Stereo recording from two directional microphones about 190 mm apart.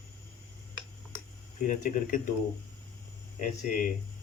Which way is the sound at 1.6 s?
40° left (ahead or behind).